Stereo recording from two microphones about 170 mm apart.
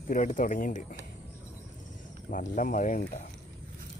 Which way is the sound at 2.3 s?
50° left (ahead or behind).